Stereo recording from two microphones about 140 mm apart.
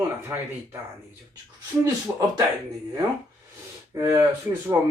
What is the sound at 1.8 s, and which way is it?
Speech, 25° right (ahead or behind).